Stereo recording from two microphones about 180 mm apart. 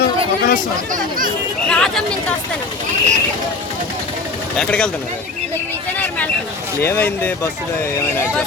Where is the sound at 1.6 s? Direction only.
5° left (ahead or behind).